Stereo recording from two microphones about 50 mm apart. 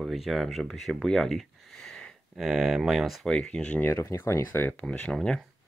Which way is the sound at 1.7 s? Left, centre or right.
Centre.